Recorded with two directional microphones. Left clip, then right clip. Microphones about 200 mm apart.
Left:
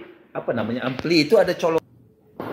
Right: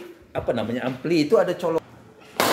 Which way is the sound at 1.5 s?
25° left (ahead or behind).